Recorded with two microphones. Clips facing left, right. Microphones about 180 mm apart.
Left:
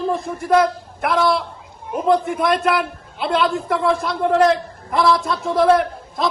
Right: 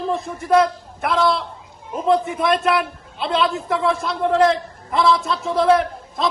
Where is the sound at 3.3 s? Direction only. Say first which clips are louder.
Left 1 dB; 55° left (ahead or behind).